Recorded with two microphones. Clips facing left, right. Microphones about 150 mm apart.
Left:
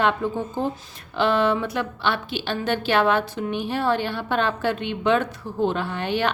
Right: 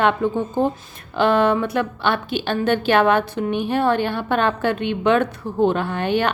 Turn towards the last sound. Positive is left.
turn(degrees=-50)  # may be behind; listen again after turning